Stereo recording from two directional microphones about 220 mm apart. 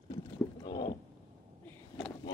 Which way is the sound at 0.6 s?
20° left (ahead or behind).